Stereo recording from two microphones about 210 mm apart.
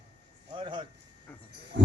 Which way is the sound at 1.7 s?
55° right (ahead or behind).